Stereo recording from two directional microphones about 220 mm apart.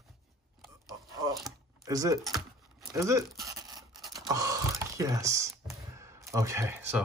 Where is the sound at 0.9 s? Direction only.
15° right (ahead or behind).